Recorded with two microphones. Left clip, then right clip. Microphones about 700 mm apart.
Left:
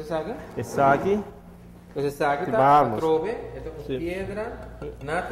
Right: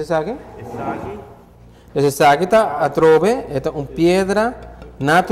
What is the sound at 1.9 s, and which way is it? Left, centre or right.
Speech, right.